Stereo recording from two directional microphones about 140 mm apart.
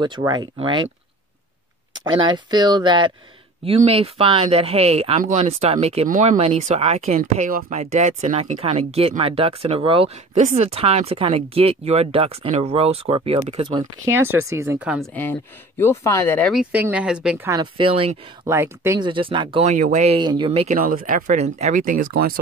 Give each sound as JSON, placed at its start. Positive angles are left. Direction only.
{"t": 0.2, "sound": "speech", "side_deg": -30}
{"t": 2.0, "sound": "speech", "side_deg": -35}
{"t": 3.6, "sound": "speech", "side_deg": -45}
{"t": 7.2, "sound": "speech", "side_deg": -70}
{"t": 14.1, "sound": "speech", "side_deg": -15}
{"t": 15.8, "sound": "speech", "side_deg": 20}
{"t": 16.5, "sound": "speech", "side_deg": -10}
{"t": 17.5, "sound": "speech", "side_deg": -35}
{"t": 18.4, "sound": "speech", "side_deg": -20}
{"t": 18.9, "sound": "speech", "side_deg": -35}
{"t": 19.6, "sound": "speech", "side_deg": -65}
{"t": 20.2, "sound": "speech", "side_deg": -35}
{"t": 20.7, "sound": "speech", "side_deg": -85}
{"t": 21.4, "sound": "speech", "side_deg": -55}